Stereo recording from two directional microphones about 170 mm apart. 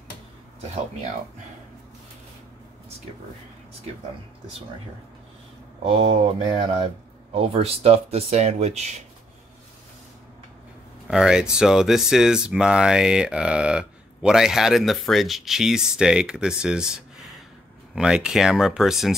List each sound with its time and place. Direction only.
5.9 s speech: 30° right (ahead or behind)
11.1 s speech: 5° right (ahead or behind)